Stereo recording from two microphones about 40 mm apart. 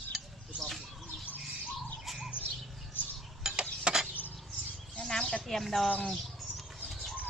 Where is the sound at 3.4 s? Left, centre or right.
Centre.